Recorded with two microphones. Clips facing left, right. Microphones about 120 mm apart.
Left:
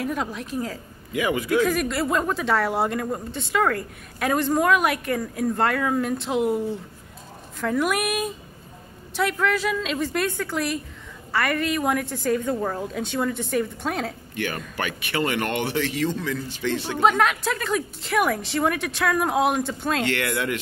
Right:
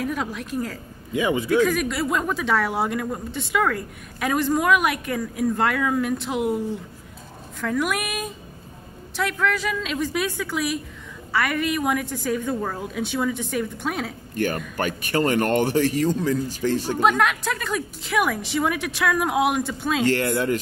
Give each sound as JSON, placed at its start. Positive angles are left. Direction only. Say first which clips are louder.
{"t": 0.0, "sound": "a woman's voice", "louder": "even", "side_deg": 0}
{"t": 1.1, "sound": "a man's voice", "louder": "right 2 dB", "side_deg": -25}
{"t": 1.5, "sound": "a woman's voice", "louder": "right 1 dB", "side_deg": 0}
{"t": 7.6, "sound": "a woman's voice", "louder": "left 2 dB", "side_deg": 5}
{"t": 14.3, "sound": "speech", "louder": "right 7 dB", "side_deg": -45}
{"t": 17.0, "sound": "a woman's voice", "louder": "left 2 dB", "side_deg": 0}
{"t": 20.1, "sound": "speech", "louder": "right 4 dB", "side_deg": -35}